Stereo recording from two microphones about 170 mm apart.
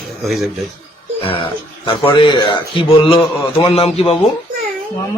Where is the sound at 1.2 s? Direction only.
35° left (ahead or behind).